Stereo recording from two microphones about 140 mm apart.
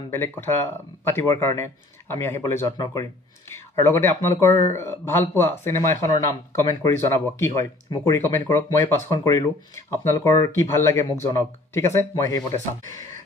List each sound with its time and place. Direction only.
0.1 s speech: 15° left (ahead or behind)